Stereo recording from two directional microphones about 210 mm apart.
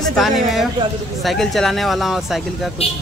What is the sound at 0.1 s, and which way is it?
Speech, centre (ahead or behind).